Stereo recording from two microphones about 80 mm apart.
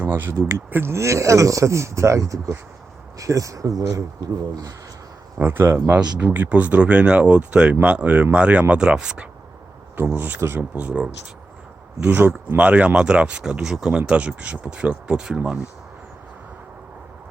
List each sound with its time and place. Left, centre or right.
0.0 s speech: right
5.4 s speech: right
6.1 s speech: right
10.2 s speech: right
10.8 s speech: centre
12.5 s speech: centre